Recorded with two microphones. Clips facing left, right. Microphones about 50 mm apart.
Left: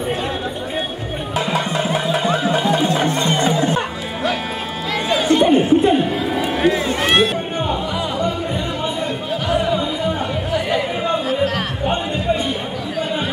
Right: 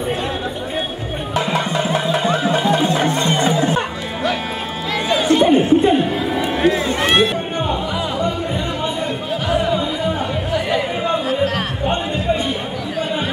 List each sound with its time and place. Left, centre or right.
1.3 s music: centre
4.9 s chatter: centre
11.8 s music: centre